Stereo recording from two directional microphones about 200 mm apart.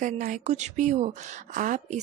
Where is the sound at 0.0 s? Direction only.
40° right (ahead or behind).